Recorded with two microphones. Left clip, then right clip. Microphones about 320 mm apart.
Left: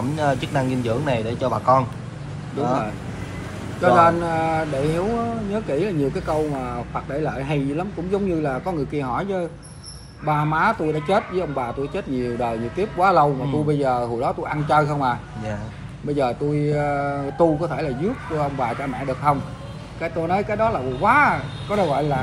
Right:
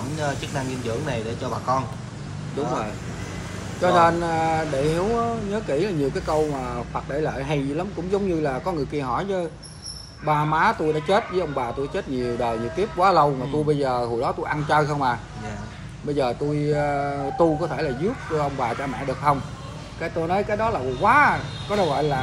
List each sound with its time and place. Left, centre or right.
0.4 s speech: left
3.8 s speech: centre
16.2 s speech: centre